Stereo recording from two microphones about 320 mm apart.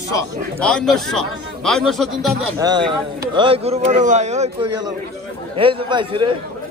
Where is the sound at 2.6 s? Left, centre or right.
Centre.